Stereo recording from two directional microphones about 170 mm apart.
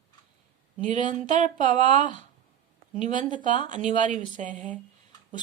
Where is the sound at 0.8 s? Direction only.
45° right (ahead or behind).